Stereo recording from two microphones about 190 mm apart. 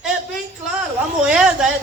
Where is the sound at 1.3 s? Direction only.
5° right (ahead or behind).